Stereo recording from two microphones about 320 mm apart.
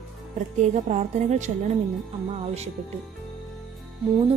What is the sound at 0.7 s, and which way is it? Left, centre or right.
Speech, right.